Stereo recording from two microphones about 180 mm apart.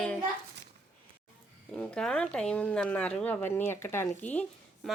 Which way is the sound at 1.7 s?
5° left (ahead or behind).